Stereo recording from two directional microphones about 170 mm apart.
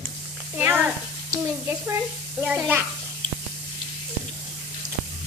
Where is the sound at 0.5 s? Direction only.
10° right (ahead or behind).